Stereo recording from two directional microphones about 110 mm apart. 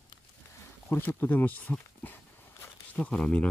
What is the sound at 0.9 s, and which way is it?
Speech, 20° left (ahead or behind).